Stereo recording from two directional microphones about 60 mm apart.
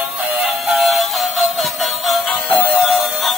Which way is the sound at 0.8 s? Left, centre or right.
Centre.